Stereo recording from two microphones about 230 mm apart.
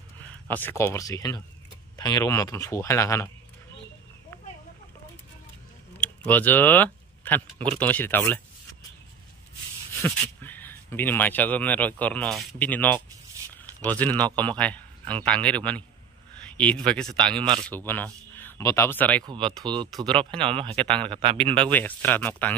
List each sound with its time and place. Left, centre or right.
0.2 s speech: centre
6.0 s speech: centre
10.0 s speech: centre
19.2 s speech: right
21.6 s speech: centre